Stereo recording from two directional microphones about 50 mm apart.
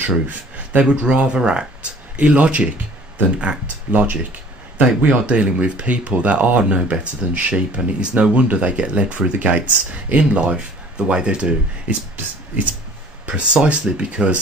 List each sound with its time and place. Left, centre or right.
0.0 s speech: right
0.8 s speech: right
12.2 s speech: right
13.3 s speech: centre